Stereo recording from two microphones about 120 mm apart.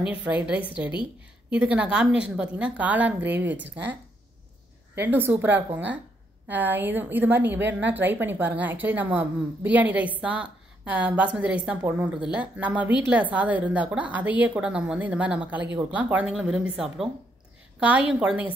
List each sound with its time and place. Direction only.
0.0 s a woman's voice: 10° right (ahead or behind)
5.0 s a woman's voice: 15° right (ahead or behind)